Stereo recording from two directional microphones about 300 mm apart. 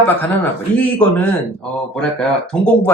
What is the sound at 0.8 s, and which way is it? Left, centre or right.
Speech, centre.